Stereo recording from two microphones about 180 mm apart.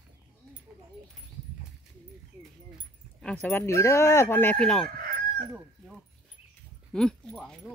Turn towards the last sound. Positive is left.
turn(degrees=5)  # may be behind; listen again after turning